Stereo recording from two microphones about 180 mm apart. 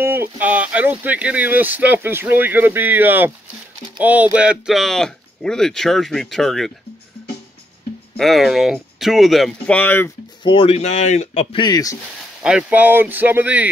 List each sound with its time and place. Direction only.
0.0 s speech: 10° right (ahead or behind)
8.2 s speech: centre (ahead or behind)
10.4 s speech: 30° left (ahead or behind)
11.5 s speech: 25° left (ahead or behind)
12.4 s speech: 5° right (ahead or behind)